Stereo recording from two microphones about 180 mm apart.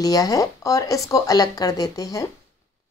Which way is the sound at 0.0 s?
20° left (ahead or behind).